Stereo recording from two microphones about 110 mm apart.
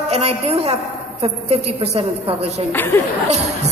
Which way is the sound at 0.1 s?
70° right (ahead or behind).